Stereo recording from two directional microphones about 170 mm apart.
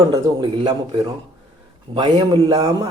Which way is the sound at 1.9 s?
30° right (ahead or behind).